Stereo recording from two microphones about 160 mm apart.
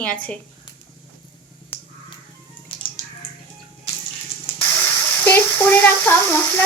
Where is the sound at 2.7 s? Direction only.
35° left (ahead or behind).